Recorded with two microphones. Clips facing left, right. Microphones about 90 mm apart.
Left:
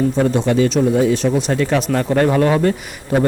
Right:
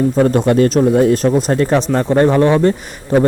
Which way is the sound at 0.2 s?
50° right (ahead or behind).